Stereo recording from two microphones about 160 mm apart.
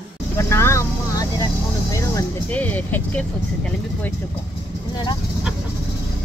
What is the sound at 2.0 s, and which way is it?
Speech, 15° left (ahead or behind).